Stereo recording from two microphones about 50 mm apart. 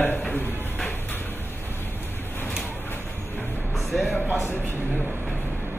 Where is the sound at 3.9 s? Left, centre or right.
Centre.